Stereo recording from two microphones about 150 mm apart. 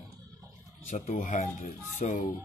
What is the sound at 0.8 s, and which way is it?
Speech, 55° left (ahead or behind).